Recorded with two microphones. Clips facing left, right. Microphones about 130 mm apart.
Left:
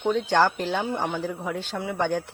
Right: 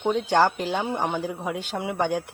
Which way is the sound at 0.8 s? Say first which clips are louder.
Right 1 dB; 20° right (ahead or behind).